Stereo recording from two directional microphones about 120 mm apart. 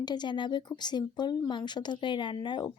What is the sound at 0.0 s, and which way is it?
Speech, 35° left (ahead or behind).